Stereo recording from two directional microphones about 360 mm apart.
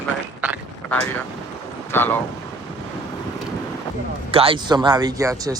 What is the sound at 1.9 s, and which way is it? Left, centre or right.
Speech, centre.